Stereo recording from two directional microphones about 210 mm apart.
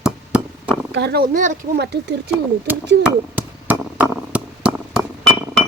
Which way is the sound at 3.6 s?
10° right (ahead or behind).